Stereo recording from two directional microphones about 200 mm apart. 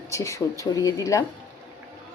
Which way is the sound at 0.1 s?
15° left (ahead or behind).